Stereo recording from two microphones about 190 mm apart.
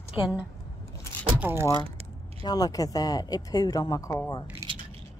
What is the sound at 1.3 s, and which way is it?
Speech, 10° right (ahead or behind).